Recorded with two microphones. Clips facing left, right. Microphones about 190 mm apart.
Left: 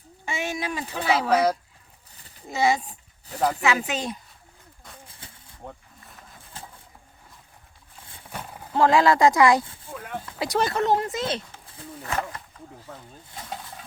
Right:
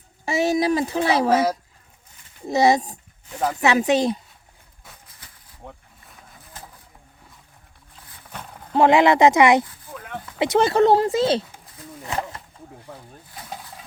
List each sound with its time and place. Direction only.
0.3 s speech: 40° right (ahead or behind)
2.5 s speech: 40° right (ahead or behind)
5.0 s a sound: 30° left (ahead or behind)
5.6 s speech: centre (ahead or behind)
8.3 s horse: 10° left (ahead or behind)
8.7 s speech: 20° right (ahead or behind)
9.9 s a sound: 5° left (ahead or behind)
10.3 s speech: 25° right (ahead or behind)
12.0 s speech: 20° right (ahead or behind)
13.5 s pig: 5° right (ahead or behind)